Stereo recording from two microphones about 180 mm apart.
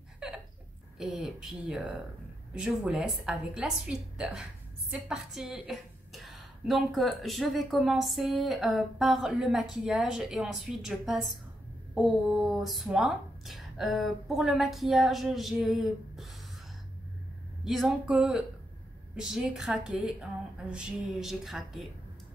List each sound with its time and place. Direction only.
0.2 s a sound: 5° right (ahead or behind)
0.9 s a woman's voice: 5° right (ahead or behind)
17.6 s a woman's voice: 5° right (ahead or behind)